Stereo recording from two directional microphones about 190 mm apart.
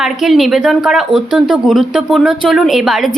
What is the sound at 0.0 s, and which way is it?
A woman's voice, centre (ahead or behind).